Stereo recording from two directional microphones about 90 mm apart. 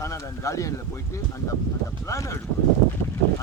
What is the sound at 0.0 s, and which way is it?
Speech, 35° left (ahead or behind).